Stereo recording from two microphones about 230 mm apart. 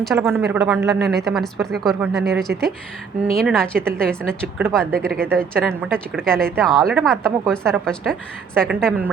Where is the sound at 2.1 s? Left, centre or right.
Right.